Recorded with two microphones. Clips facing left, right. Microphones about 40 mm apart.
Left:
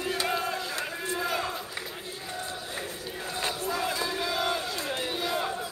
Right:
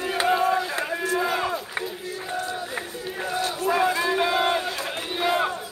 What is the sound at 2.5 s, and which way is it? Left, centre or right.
Run, right.